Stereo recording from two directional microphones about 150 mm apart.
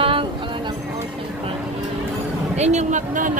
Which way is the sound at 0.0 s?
35° right (ahead or behind).